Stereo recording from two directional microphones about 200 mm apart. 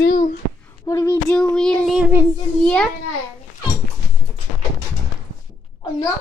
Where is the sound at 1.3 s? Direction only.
5° left (ahead or behind).